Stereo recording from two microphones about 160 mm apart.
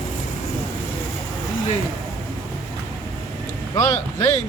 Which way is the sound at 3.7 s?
20° left (ahead or behind).